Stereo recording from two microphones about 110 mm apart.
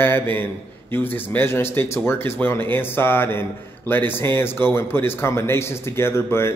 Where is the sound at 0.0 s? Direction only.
20° left (ahead or behind).